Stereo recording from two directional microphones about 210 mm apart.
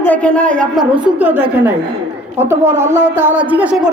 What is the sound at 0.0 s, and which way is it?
A woman's voice, 5° left (ahead or behind).